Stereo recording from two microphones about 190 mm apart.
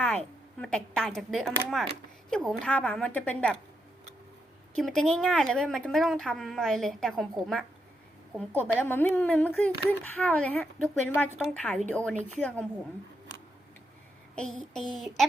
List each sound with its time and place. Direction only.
0.6 s speech: 5° left (ahead or behind)
4.7 s speech: 5° left (ahead or behind)
14.3 s speech: 5° left (ahead or behind)